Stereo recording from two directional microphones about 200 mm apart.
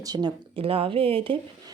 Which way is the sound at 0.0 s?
20° right (ahead or behind).